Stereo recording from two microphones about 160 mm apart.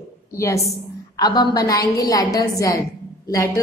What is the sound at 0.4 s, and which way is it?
A woman's voice, 15° left (ahead or behind).